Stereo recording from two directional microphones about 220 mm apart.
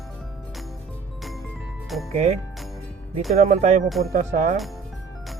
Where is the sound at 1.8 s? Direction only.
Centre (ahead or behind).